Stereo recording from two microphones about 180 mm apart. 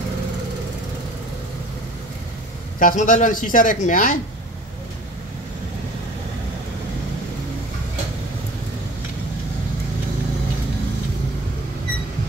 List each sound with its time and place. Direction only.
2.8 s speech: 45° left (ahead or behind)